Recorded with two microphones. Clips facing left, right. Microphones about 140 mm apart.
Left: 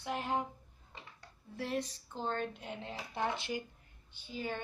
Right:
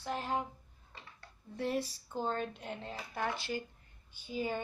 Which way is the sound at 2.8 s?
20° left (ahead or behind).